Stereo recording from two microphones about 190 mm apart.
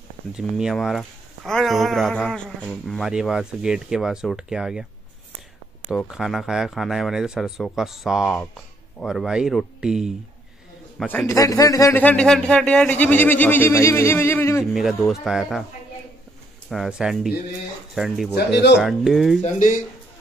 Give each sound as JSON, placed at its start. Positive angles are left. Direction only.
{"t": 0.4, "sound": "speech", "side_deg": -5}
{"t": 5.9, "sound": "speech", "side_deg": 0}
{"t": 11.0, "sound": "a man's voice", "side_deg": 10}
{"t": 14.6, "sound": "speech", "side_deg": 0}
{"t": 16.6, "sound": "speech", "side_deg": 0}
{"t": 18.3, "sound": "speech", "side_deg": 60}
{"t": 18.8, "sound": "speech", "side_deg": 0}
{"t": 19.4, "sound": "speech", "side_deg": 45}